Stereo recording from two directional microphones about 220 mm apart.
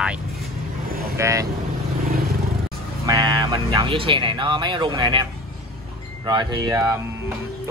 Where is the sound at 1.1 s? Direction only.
15° right (ahead or behind).